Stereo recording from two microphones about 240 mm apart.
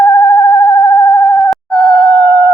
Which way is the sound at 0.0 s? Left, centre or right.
Centre.